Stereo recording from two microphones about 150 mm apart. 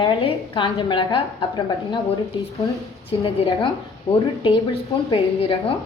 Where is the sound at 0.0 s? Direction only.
35° left (ahead or behind).